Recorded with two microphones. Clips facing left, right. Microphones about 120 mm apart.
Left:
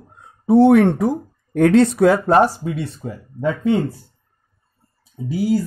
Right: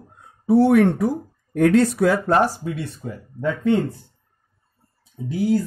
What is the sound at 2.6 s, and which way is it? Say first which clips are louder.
Speech: left 3 dB; 40° left (ahead or behind).